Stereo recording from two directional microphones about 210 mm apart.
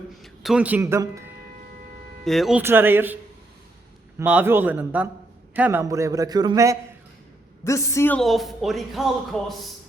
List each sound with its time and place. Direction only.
0.2 s speech: 5° right (ahead or behind)
2.2 s a man's voice: centre (ahead or behind)
4.2 s a man's voice: 10° right (ahead or behind)
7.6 s speech: 15° left (ahead or behind)